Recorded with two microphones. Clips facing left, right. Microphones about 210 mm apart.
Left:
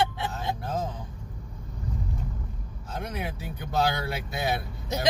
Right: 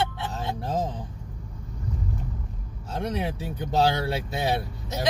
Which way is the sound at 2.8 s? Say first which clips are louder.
Right 5 dB; 35° right (ahead or behind).